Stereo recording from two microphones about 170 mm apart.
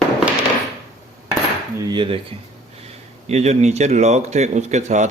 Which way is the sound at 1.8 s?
25° right (ahead or behind).